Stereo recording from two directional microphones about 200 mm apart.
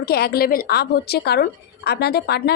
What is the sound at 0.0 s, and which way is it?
A woman's voice, 50° left (ahead or behind).